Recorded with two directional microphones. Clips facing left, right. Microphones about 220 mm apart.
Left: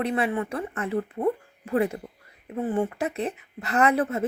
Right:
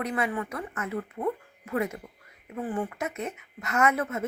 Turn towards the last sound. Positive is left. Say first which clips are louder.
# left 4 dB
turn(degrees=35)  # may be behind; listen again after turning